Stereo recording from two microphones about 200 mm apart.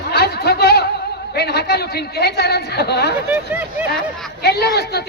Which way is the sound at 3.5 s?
10° right (ahead or behind).